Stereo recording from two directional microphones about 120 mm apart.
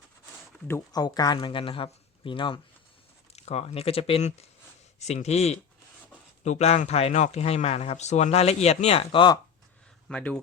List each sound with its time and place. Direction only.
0.9 s speech: 30° left (ahead or behind)
3.3 s speech: 60° left (ahead or behind)
10.1 s speech: 5° left (ahead or behind)